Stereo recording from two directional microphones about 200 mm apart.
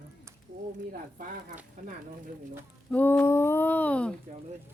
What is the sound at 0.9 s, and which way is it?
Speech, 45° right (ahead or behind).